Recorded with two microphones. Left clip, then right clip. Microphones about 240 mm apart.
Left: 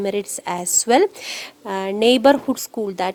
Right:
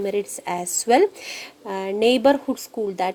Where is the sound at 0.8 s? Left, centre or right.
Left.